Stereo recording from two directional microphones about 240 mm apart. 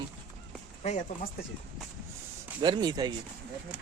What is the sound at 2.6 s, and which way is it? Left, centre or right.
Speech, centre.